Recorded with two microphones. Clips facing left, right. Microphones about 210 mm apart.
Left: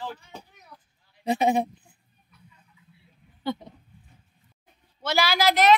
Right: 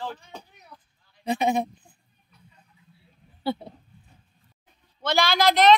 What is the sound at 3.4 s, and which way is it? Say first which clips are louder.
Speech: right 2 dB; 35° right (ahead or behind).